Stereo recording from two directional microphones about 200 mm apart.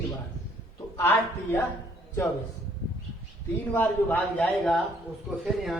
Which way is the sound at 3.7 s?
10° left (ahead or behind).